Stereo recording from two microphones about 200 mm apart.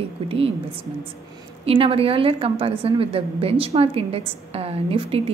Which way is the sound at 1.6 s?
30° right (ahead or behind).